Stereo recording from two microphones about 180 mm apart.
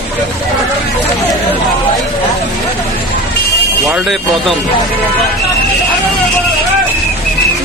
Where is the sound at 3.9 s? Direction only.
Centre (ahead or behind).